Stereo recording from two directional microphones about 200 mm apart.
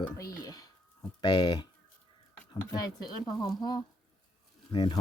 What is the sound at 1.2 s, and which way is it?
Speech, 20° left (ahead or behind).